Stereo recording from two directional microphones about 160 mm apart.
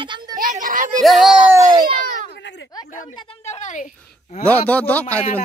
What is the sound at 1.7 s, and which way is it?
Speech, 25° right (ahead or behind).